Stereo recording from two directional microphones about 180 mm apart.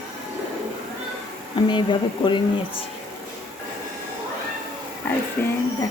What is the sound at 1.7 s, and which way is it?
Speech, 25° left (ahead or behind).